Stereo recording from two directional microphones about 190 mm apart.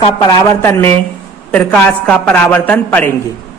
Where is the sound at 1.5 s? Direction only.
5° left (ahead or behind).